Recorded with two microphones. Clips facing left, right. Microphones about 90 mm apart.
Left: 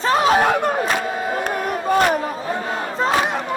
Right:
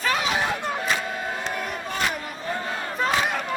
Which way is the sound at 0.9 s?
55° left (ahead or behind).